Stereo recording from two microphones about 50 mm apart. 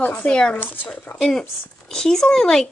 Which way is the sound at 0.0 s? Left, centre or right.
Left.